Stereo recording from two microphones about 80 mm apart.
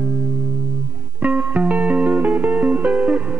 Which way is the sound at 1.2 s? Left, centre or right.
Centre.